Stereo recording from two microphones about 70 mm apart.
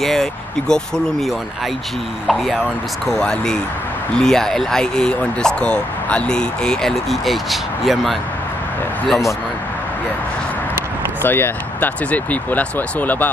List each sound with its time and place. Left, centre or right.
0.0 s speech: centre
11.2 s speech: left